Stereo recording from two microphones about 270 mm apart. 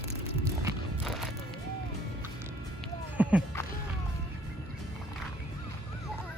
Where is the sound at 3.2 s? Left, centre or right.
Centre.